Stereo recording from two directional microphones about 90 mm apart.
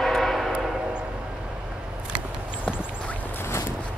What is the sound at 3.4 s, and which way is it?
Boat, 30° left (ahead or behind).